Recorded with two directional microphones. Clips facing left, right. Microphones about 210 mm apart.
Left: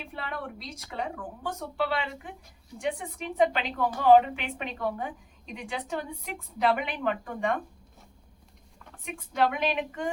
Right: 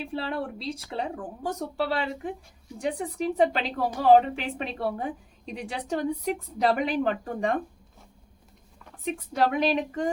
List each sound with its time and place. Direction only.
0.0 s a woman's voice: 30° right (ahead or behind)
9.0 s a woman's voice: 35° right (ahead or behind)